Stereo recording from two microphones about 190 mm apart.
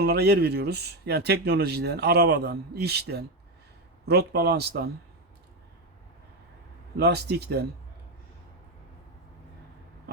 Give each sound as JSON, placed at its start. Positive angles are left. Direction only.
{"t": 0.0, "sound": "speech", "side_deg": -60}
{"t": 6.9, "sound": "speech", "side_deg": -60}